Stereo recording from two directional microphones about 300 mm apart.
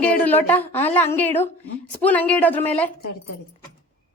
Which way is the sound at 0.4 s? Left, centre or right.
Centre.